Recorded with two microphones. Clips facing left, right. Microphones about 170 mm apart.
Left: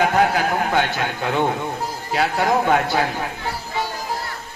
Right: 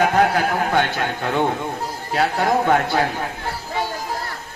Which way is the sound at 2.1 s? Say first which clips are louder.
Even; 45° right (ahead or behind).